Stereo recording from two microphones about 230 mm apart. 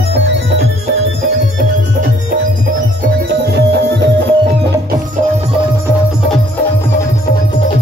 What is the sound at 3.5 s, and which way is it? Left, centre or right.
Music, right.